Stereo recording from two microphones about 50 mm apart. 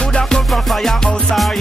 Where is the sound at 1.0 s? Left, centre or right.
Centre.